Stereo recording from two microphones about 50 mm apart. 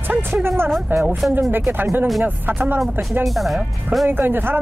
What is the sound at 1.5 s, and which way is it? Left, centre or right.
Speech, right.